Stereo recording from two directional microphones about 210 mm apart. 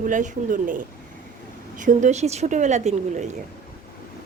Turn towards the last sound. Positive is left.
turn(degrees=-35)  # may be behind; listen again after turning